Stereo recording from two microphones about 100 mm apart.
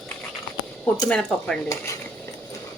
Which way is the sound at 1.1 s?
5° left (ahead or behind).